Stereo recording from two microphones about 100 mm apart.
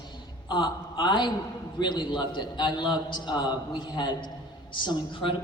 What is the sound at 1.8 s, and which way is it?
A man's voice, 50° left (ahead or behind).